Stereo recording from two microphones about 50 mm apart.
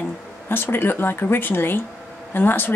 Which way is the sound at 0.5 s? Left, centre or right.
Left.